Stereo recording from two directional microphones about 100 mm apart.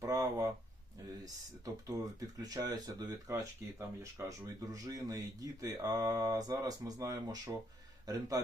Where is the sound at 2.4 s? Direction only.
40° right (ahead or behind).